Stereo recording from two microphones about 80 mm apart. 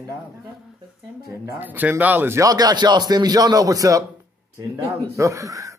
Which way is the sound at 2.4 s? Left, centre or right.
Right.